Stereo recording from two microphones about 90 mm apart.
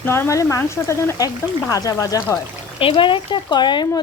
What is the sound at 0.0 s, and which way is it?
Speech, 25° left (ahead or behind).